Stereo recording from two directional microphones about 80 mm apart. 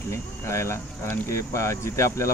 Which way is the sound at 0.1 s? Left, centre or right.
Left.